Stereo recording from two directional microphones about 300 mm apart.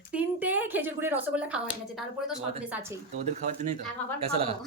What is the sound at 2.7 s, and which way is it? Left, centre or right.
Speech, centre.